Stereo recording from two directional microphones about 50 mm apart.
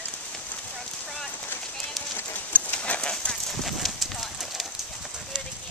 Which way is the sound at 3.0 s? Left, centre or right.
Centre.